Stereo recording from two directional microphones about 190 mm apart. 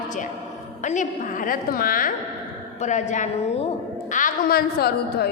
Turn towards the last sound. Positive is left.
turn(degrees=55)  # may be behind; listen again after turning